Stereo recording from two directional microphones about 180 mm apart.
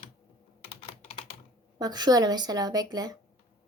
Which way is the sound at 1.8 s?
20° right (ahead or behind).